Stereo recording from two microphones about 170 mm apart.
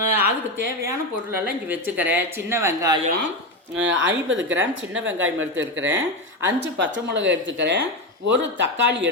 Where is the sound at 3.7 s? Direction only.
90° right.